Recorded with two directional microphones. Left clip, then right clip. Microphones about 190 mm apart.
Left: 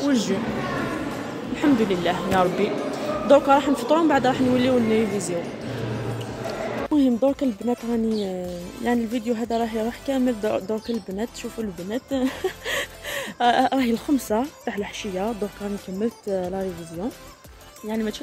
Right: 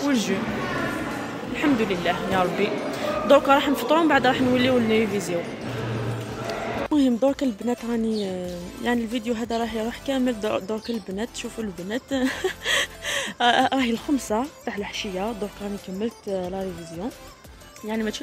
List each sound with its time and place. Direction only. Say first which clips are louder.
0.0 s speech: left 1 dB; 10° left (ahead or behind)
1.5 s speech: left 2 dB; 15° left (ahead or behind)
6.4 s speech: even; centre (ahead or behind)
16.3 s speech: left 2 dB; 15° left (ahead or behind)
17.8 s speech: even; centre (ahead or behind)